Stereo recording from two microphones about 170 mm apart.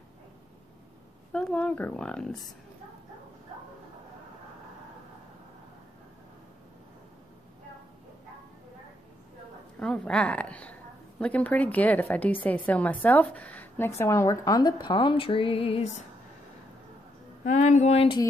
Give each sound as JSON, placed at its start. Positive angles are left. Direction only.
{"t": 1.3, "sound": "speech", "side_deg": 5}
{"t": 9.8, "sound": "a woman's voice", "side_deg": 5}
{"t": 17.5, "sound": "speech", "side_deg": 45}